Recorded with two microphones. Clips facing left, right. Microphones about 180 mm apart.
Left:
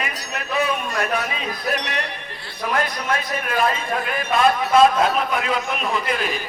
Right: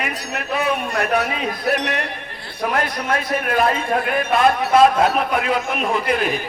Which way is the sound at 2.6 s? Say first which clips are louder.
Right 2 dB; 55° right (ahead or behind).